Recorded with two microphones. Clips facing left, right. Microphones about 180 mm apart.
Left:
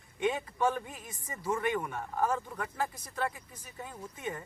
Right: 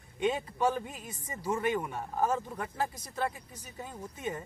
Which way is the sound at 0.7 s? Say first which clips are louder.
Right 2 dB; 25° right (ahead or behind).